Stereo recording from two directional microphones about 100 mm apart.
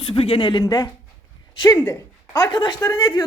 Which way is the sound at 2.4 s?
45° left (ahead or behind).